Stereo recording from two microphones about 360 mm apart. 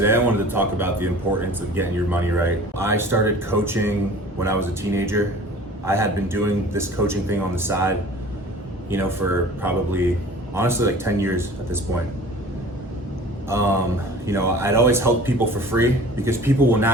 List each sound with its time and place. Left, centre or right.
0.0 s speech: centre
13.5 s speech: centre